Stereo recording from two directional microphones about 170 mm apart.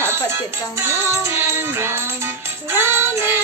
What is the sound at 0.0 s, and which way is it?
Music, 15° right (ahead or behind).